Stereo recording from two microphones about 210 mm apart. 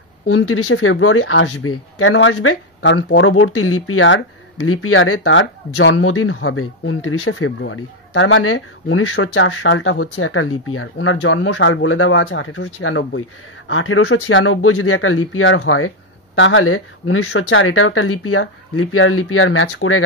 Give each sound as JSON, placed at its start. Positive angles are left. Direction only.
{"t": 0.3, "sound": "speech", "side_deg": 85}
{"t": 4.6, "sound": "speech", "side_deg": 90}
{"t": 10.1, "sound": "speech", "side_deg": 80}